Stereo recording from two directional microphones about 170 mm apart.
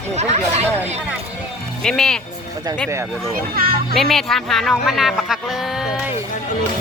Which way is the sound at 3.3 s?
60° right (ahead or behind).